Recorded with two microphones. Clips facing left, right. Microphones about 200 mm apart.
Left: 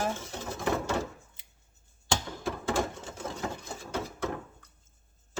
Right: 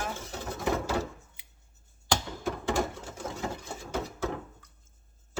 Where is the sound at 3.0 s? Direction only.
5° right (ahead or behind).